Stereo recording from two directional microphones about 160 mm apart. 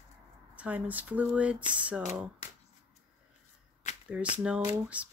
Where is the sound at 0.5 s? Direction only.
10° right (ahead or behind).